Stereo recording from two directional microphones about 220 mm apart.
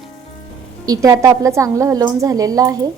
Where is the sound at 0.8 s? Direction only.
15° right (ahead or behind).